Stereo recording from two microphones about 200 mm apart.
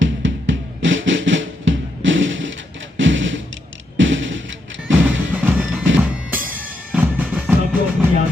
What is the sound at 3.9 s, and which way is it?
Music, 70° right (ahead or behind).